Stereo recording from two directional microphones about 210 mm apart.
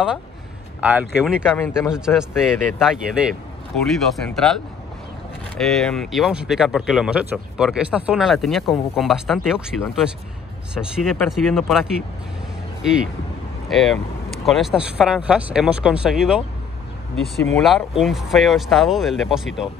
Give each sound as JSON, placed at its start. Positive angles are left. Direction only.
{"t": 0.7, "sound": "speech", "side_deg": -5}
{"t": 5.6, "sound": "speech", "side_deg": 0}
{"t": 13.7, "sound": "speech", "side_deg": 0}
{"t": 17.6, "sound": "speech", "side_deg": 0}